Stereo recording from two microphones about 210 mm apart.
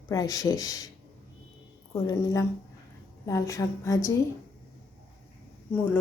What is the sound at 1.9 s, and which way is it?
A woman's voice, 15° left (ahead or behind).